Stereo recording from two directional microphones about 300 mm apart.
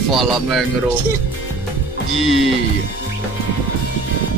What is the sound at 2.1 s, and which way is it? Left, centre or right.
Music, right.